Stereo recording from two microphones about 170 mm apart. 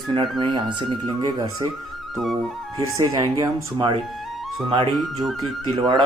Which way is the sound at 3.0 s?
20° right (ahead or behind).